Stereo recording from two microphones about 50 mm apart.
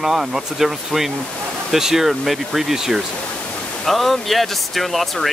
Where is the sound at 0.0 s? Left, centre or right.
Centre.